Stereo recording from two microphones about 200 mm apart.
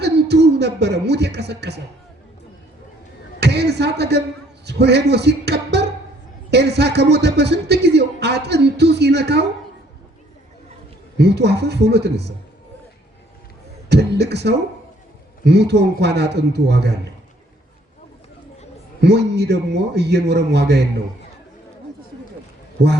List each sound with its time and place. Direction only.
0.0 s a sound: 55° right (ahead or behind)
3.4 s a sound: 55° right (ahead or behind)
4.6 s speech: 55° right (ahead or behind)
11.2 s speech: 55° right (ahead or behind)
13.9 s speech: 55° right (ahead or behind)
19.0 s speech: 55° right (ahead or behind)